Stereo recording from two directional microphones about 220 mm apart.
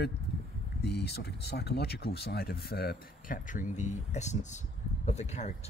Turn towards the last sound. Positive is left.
turn(degrees=30)  # may be behind; listen again after turning